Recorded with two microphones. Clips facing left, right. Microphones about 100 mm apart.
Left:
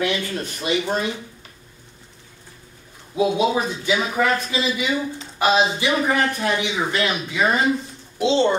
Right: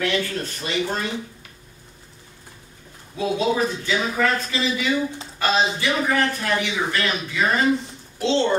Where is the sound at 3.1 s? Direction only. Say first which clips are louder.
Left 2 dB; 15° left (ahead or behind).